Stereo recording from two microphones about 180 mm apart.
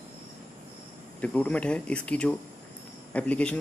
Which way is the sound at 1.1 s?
10° left (ahead or behind).